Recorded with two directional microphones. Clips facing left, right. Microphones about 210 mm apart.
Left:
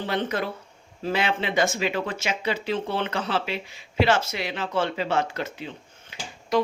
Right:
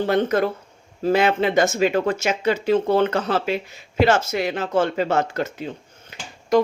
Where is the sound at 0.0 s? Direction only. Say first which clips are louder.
Right 8 dB; 45° right (ahead or behind).